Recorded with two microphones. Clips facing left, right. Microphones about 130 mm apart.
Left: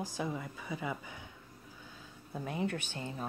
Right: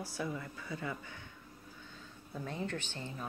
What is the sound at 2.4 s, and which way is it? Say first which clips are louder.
Speech: left 4 dB; 10° left (ahead or behind).